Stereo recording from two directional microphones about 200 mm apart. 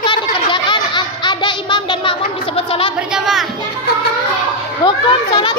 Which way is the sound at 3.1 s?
Centre (ahead or behind).